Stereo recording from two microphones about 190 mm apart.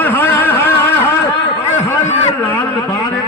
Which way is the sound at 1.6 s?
35° left (ahead or behind).